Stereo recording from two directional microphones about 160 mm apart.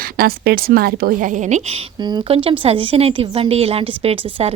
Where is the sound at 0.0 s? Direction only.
70° right (ahead or behind); by 1.8 s 45° right (ahead or behind).